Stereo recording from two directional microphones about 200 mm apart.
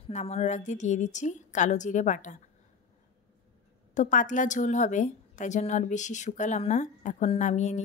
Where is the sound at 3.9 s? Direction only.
40° left (ahead or behind).